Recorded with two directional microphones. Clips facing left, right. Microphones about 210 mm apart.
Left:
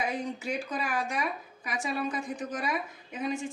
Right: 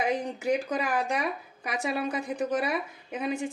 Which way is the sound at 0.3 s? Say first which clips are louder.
Right 6 dB; 60° right (ahead or behind).